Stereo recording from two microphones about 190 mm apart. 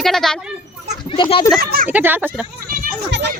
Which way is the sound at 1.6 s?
50° right (ahead or behind).